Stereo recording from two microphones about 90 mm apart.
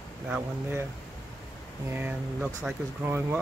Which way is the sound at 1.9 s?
25° right (ahead or behind).